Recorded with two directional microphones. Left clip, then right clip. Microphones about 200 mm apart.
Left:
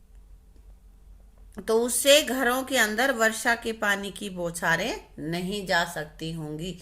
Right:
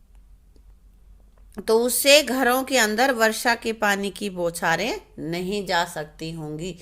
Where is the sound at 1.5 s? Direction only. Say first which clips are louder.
Right 4 dB; 35° right (ahead or behind).